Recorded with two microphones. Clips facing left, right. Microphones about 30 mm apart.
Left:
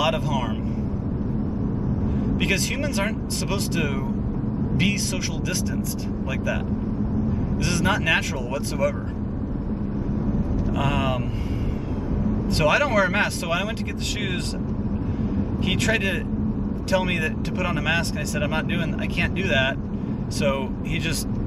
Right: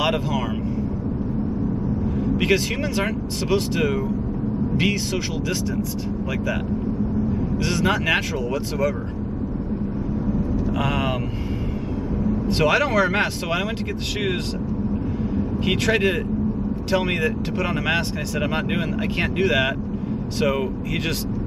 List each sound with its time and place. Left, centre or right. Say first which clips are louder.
0.0 s vehicle: right 1 dB; centre
2.1 s speech: right 4 dB; centre
7.6 s speech: right 1 dB; centre
10.8 s speech: left 1 dB; centre
12.2 s speech: right 2 dB; centre
15.3 s speech: right 3 dB; centre